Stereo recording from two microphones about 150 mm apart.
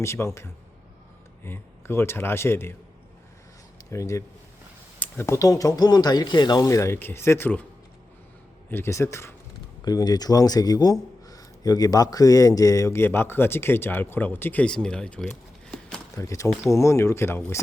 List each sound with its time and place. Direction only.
0.0 s a man's voice: 20° left (ahead or behind)
3.8 s speech: 20° left (ahead or behind)
8.7 s a man's voice: 20° left (ahead or behind)
16.1 s speech: 20° left (ahead or behind)